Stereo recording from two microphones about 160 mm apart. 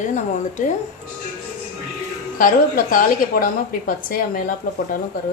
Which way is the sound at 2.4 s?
60° left (ahead or behind).